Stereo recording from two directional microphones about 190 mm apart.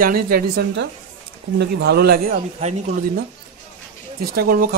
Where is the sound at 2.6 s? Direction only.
35° right (ahead or behind).